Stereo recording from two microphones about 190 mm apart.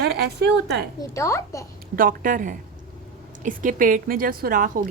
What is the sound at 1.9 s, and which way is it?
Speech, 45° right (ahead or behind).